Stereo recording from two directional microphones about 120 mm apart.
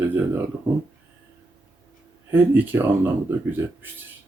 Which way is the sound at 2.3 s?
15° right (ahead or behind).